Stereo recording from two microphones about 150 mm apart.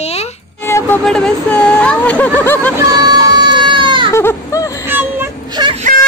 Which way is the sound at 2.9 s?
25° right (ahead or behind).